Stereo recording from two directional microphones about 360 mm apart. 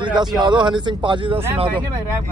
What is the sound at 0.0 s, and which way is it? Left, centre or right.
Speech, centre.